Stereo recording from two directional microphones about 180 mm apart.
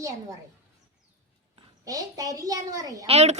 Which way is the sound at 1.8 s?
20° right (ahead or behind).